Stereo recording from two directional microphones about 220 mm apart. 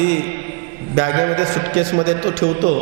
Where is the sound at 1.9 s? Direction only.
20° right (ahead or behind).